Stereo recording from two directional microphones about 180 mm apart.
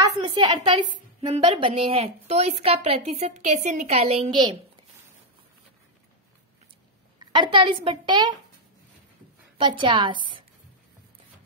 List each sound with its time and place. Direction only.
0.4 s a woman's voice: 25° right (ahead or behind)
7.2 s a woman's voice: 25° right (ahead or behind)
9.6 s a woman's voice: 30° right (ahead or behind)